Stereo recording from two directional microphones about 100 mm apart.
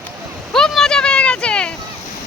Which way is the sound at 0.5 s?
5° left (ahead or behind).